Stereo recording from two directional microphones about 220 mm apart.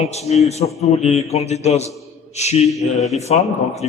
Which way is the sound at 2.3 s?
30° left (ahead or behind).